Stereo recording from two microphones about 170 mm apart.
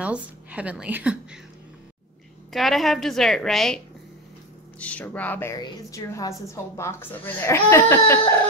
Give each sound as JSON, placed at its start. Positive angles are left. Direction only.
{"t": 0.0, "sound": "a woman's voice", "side_deg": -10}
{"t": 2.5, "sound": "a woman's voice", "side_deg": 0}